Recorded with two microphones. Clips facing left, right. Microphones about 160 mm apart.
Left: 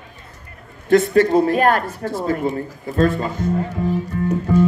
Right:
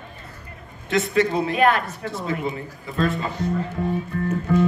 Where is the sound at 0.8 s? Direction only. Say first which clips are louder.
Left 7 dB; 50° left (ahead or behind).